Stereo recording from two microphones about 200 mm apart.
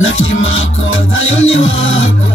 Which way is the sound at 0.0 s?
80° left.